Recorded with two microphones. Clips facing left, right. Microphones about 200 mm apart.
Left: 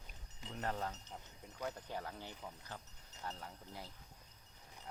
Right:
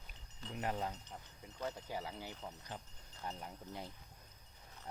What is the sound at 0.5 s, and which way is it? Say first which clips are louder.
Speech: right 1 dB; 15° right (ahead or behind).